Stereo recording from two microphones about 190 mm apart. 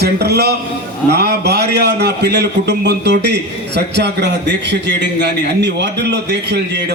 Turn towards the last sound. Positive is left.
turn(degrees=-65)  # may be behind; listen again after turning